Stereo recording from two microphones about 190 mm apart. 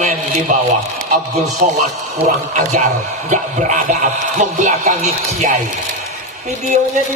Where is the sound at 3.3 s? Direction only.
40° right (ahead or behind).